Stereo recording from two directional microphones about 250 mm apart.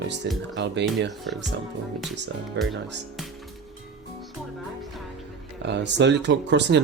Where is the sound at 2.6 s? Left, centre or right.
Right.